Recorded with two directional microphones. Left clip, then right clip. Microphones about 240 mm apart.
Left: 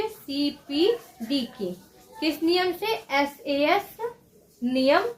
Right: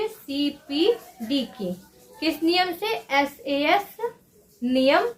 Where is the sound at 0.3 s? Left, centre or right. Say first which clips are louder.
Right 1 dB; right.